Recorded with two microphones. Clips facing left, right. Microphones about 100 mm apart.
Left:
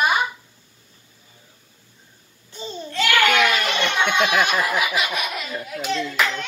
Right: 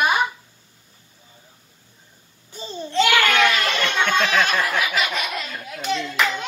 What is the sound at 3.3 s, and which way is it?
Children playing, 10° left (ahead or behind).